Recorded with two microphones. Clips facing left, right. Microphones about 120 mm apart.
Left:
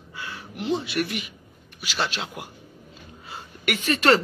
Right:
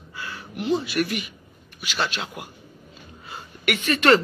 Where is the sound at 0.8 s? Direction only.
25° left (ahead or behind).